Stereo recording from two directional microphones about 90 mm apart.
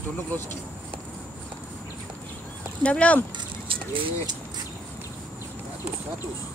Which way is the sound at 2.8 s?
15° left (ahead or behind).